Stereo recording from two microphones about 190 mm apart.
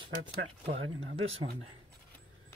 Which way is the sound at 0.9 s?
90° right.